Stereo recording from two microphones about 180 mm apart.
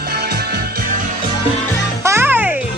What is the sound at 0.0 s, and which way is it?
Music, 60° right (ahead or behind).